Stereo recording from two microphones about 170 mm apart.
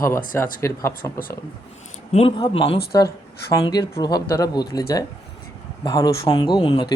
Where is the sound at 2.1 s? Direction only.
30° left (ahead or behind).